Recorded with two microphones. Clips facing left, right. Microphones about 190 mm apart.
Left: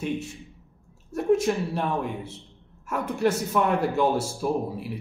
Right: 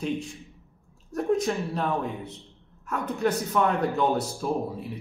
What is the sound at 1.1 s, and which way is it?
Speech, 5° left (ahead or behind).